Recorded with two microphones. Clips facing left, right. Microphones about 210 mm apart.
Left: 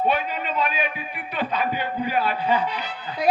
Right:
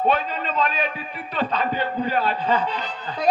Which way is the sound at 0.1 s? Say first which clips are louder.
Right 1 dB; 10° left (ahead or behind).